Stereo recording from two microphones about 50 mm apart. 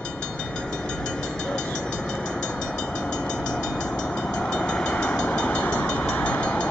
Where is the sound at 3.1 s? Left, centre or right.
Centre.